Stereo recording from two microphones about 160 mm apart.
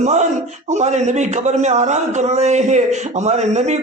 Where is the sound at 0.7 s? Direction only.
45° right (ahead or behind).